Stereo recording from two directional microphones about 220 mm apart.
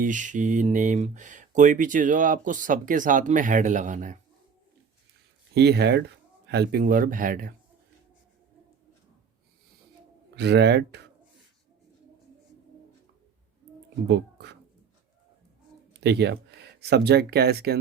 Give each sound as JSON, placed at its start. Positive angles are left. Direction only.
{"t": 0.0, "sound": "speech", "side_deg": -35}
{"t": 5.5, "sound": "speech", "side_deg": -50}
{"t": 10.3, "sound": "speech", "side_deg": -50}
{"t": 14.1, "sound": "a sound", "side_deg": -50}
{"t": 15.9, "sound": "speech", "side_deg": -50}